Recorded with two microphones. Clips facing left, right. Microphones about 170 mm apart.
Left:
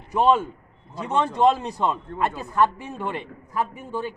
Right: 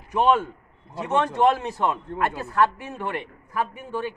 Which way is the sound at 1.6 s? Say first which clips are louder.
Even; 15° left (ahead or behind).